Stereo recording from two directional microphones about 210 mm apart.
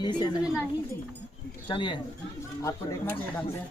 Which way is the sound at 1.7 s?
25° left (ahead or behind).